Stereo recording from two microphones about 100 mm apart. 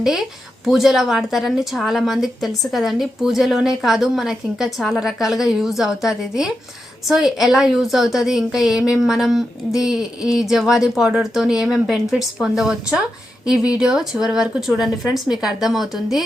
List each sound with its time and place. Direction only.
0.0 s speech: 5° right (ahead or behind)